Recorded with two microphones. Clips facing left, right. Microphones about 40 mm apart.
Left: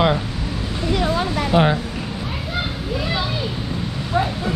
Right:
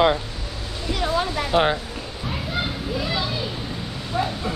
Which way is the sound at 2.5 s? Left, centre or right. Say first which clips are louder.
Left 2 dB; centre.